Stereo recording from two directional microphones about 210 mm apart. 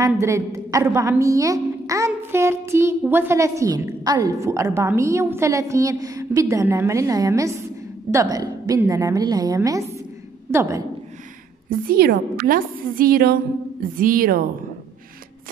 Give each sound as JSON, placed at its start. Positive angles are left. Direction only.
{"t": 0.0, "sound": "a woman's voice", "side_deg": -15}
{"t": 11.7, "sound": "a woman's voice", "side_deg": -45}